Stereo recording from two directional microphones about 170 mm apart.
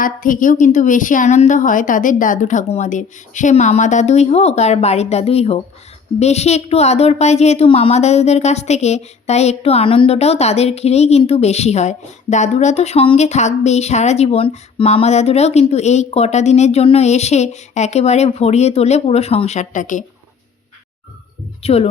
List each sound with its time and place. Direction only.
0.0 s a woman's voice: 50° left (ahead or behind)
21.6 s speech: 35° left (ahead or behind)